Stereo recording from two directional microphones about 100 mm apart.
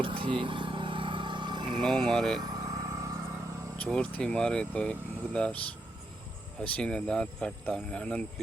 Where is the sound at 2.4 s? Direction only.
40° right (ahead or behind).